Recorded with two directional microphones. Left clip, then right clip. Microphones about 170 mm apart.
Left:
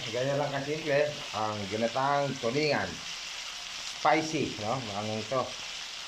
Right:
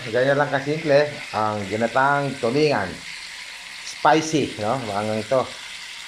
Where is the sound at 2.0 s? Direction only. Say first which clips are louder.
Right 10 dB; 10° right (ahead or behind).